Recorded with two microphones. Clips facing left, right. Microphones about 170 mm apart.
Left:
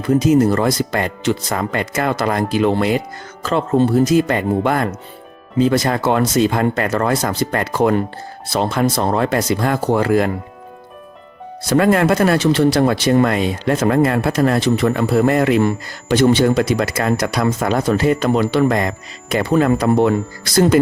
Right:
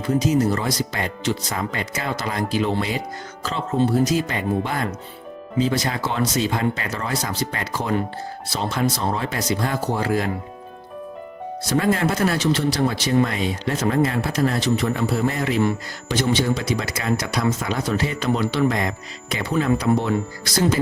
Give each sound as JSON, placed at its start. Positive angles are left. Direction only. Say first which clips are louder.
{"t": 0.2, "sound": "speech", "louder": "left 6 dB", "side_deg": 50}
{"t": 11.7, "sound": "speech", "louder": "left 7 dB", "side_deg": 60}